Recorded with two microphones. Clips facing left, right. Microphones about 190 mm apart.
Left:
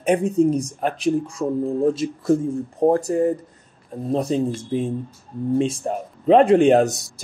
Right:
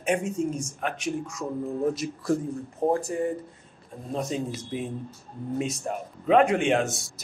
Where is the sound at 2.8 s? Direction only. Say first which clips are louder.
Left 7 dB; 40° left (ahead or behind).